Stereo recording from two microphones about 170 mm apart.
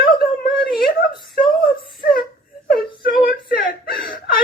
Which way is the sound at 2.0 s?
55° left (ahead or behind).